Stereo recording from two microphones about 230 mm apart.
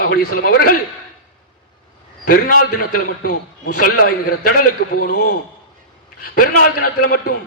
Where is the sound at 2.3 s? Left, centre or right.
Left.